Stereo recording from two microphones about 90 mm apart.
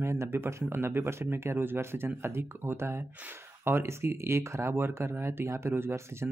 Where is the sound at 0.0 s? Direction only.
30° right (ahead or behind).